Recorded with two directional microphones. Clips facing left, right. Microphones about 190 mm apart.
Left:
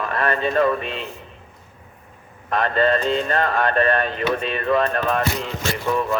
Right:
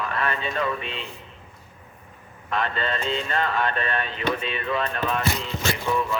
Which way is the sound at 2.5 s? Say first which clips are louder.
Left 8 dB; 45° left (ahead or behind).